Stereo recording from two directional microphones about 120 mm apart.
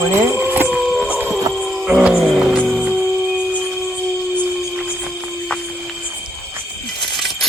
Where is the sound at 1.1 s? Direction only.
15° right (ahead or behind).